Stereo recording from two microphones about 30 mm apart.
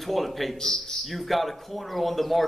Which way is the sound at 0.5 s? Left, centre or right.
Centre.